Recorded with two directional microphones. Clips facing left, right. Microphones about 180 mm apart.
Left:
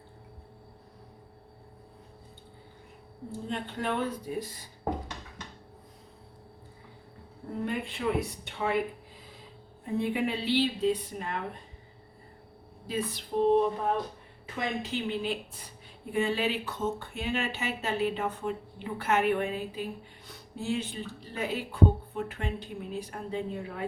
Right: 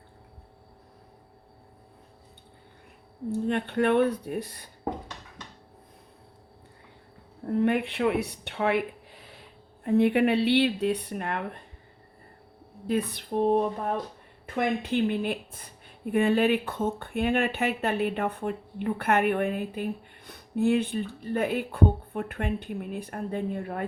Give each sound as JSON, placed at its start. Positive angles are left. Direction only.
{"t": 3.4, "sound": "speech", "side_deg": -65}
{"t": 7.6, "sound": "speech", "side_deg": -65}
{"t": 12.9, "sound": "speech", "side_deg": -60}